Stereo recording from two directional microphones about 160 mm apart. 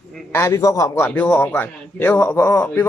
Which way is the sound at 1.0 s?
5° left (ahead or behind).